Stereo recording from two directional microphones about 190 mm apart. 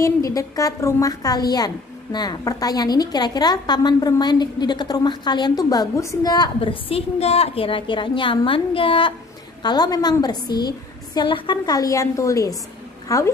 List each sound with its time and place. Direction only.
0.0 s a woman's voice: 15° left (ahead or behind)